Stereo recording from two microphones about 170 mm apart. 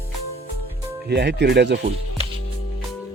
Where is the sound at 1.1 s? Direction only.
80° right.